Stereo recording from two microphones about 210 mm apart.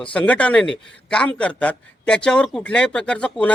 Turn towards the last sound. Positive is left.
turn(degrees=5)  # may be behind; listen again after turning